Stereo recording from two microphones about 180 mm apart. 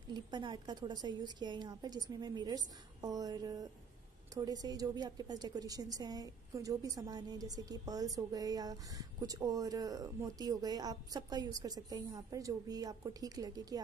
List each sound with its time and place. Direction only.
0.1 s a woman's voice: 25° right (ahead or behind)